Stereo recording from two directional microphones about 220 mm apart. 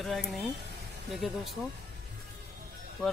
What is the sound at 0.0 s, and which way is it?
Speech, centre (ahead or behind).